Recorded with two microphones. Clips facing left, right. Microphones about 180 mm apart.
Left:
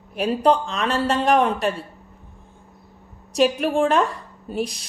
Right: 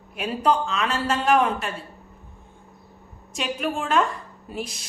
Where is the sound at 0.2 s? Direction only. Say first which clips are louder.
Left 4 dB; 35° left (ahead or behind).